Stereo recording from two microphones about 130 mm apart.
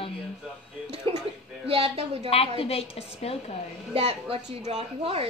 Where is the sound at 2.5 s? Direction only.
50° left (ahead or behind).